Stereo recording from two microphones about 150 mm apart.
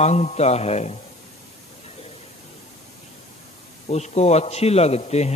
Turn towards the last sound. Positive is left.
turn(degrees=45)  # may be behind; listen again after turning